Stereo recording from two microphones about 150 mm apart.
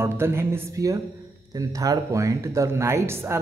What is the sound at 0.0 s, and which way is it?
Speech, 15° right (ahead or behind).